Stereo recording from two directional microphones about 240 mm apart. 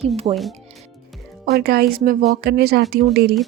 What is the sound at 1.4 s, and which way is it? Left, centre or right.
Speech, right.